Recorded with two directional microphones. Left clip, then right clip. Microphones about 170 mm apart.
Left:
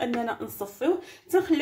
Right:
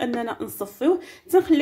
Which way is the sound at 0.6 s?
35° right (ahead or behind).